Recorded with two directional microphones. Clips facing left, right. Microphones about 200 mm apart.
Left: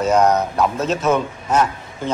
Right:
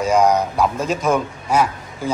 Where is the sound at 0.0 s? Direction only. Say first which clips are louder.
Even; 10° right (ahead or behind).